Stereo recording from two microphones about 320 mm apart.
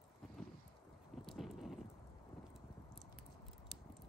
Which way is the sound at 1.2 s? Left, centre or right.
Centre.